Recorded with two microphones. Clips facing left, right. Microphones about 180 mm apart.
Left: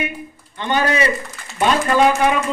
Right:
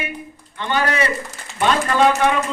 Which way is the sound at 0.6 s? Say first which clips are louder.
Left 2 dB; 20° left (ahead or behind).